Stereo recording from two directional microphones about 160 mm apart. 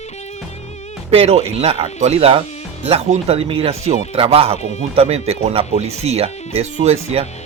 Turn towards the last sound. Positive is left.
turn(degrees=-45)  # may be behind; listen again after turning